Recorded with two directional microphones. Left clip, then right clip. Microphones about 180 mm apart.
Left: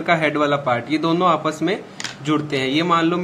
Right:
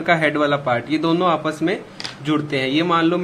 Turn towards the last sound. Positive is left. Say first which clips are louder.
# even
turn(degrees=0)  # may be behind; listen again after turning